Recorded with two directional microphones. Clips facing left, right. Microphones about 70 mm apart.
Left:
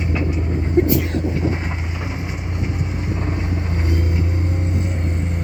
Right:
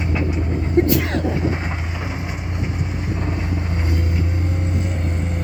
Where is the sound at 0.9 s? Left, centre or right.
Right.